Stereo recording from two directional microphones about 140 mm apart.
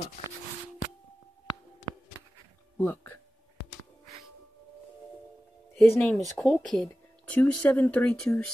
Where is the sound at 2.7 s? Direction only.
15° left (ahead or behind).